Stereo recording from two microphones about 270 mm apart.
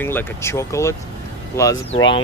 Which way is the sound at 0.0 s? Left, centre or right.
Centre.